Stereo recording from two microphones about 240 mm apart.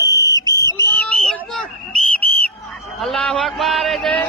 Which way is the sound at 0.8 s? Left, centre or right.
Centre.